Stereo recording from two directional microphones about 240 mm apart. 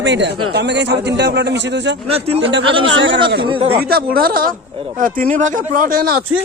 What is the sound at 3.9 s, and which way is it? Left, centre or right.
Speech, right.